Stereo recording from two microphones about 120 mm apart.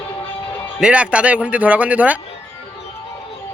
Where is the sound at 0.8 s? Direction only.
10° right (ahead or behind).